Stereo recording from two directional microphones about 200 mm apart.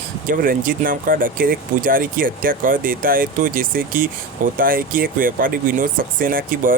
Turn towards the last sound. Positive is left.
turn(degrees=-45)  # may be behind; listen again after turning